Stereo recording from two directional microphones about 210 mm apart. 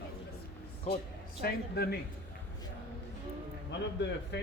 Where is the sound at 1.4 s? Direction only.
50° left (ahead or behind).